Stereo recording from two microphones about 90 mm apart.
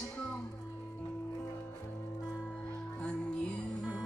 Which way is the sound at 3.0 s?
15° left (ahead or behind).